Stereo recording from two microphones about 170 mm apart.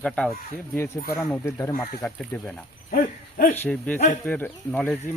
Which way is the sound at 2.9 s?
60° left (ahead or behind).